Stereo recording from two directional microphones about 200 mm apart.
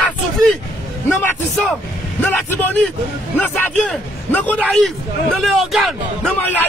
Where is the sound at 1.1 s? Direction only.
5° left (ahead or behind).